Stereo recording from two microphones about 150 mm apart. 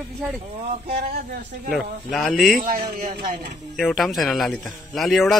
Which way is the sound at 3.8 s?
Centre (ahead or behind).